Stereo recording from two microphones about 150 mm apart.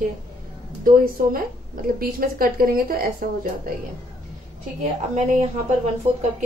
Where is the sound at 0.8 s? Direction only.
70° right (ahead or behind).